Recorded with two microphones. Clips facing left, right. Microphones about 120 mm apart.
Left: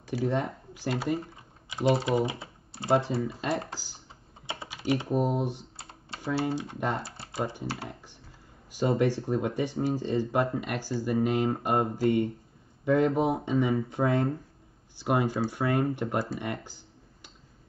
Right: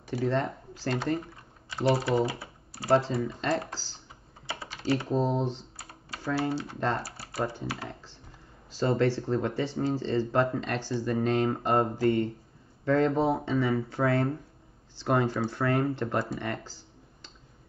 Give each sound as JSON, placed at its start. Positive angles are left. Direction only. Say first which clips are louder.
{"t": 0.1, "sound": "speech", "louder": "right 1 dB", "side_deg": 15}
{"t": 1.7, "sound": "typing", "louder": "even", "side_deg": 15}
{"t": 2.0, "sound": "speech", "louder": "even", "side_deg": 20}
{"t": 3.2, "sound": "speech", "louder": "even", "side_deg": 5}
{"t": 3.4, "sound": "speech", "louder": "right 1 dB", "side_deg": 15}
{"t": 5.8, "sound": "speech", "louder": "even", "side_deg": 25}
{"t": 8.7, "sound": "speech", "louder": "even", "side_deg": 15}
{"t": 16.6, "sound": "computer keyboard", "louder": "right 1 dB", "side_deg": 15}